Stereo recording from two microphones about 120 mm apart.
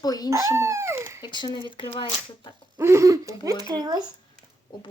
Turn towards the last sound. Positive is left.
turn(degrees=-35)  # may be behind; listen again after turning